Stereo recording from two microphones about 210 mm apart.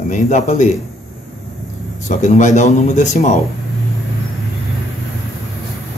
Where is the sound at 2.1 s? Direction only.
35° left (ahead or behind).